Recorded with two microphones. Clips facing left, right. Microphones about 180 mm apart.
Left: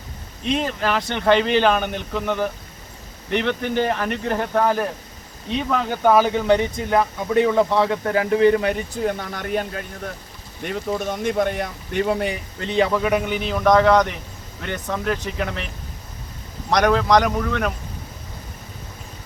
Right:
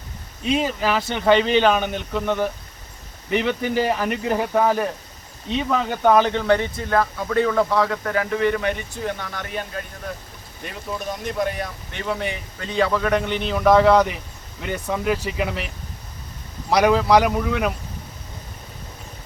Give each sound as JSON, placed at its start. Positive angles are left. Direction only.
{"t": 0.4, "sound": "speech", "side_deg": -5}
{"t": 10.7, "sound": "speech", "side_deg": 55}
{"t": 12.0, "sound": "speech", "side_deg": 30}
{"t": 12.7, "sound": "speech", "side_deg": 15}